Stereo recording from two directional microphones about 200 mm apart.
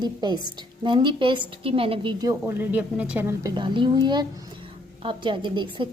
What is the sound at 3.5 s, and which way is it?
A woman's voice, 25° right (ahead or behind).